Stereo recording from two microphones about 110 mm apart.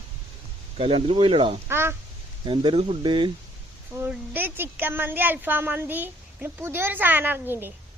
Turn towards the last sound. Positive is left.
turn(degrees=-20)  # may be behind; listen again after turning